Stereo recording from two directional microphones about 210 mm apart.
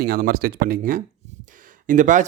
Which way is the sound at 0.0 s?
45° right (ahead or behind).